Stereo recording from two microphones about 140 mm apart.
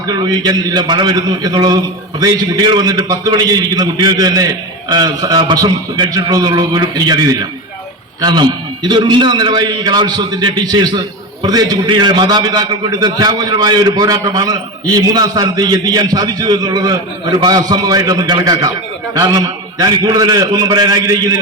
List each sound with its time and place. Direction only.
0.1 s a man's voice: 30° right (ahead or behind)